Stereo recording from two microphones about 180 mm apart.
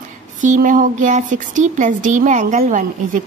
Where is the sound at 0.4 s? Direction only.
45° right (ahead or behind).